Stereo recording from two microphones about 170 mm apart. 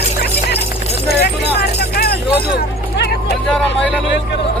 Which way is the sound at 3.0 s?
75° left (ahead or behind).